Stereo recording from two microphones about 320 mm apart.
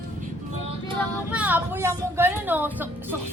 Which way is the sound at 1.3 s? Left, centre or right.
Centre.